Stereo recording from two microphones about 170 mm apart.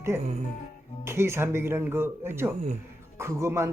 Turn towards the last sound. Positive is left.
turn(degrees=-15)  # may be behind; listen again after turning